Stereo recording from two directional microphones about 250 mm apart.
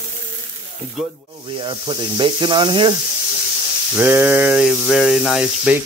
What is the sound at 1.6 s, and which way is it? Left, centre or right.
Speech, centre.